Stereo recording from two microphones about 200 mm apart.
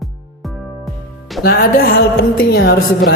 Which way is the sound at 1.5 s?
50° left (ahead or behind).